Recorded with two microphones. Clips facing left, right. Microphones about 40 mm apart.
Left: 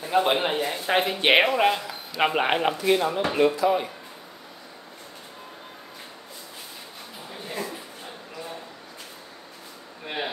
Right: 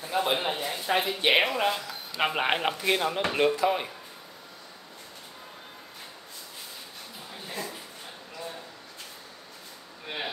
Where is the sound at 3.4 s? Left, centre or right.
Right.